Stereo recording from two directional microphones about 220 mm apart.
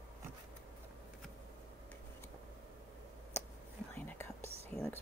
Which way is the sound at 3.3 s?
10° left (ahead or behind).